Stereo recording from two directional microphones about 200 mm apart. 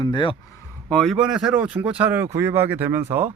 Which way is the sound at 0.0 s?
25° left (ahead or behind).